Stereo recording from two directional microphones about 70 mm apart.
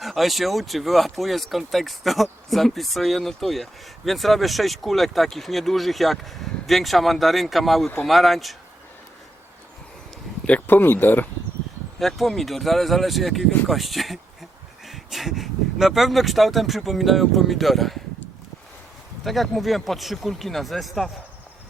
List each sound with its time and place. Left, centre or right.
0.0 s speech: centre
10.4 s speech: left
11.9 s speech: centre
19.2 s speech: centre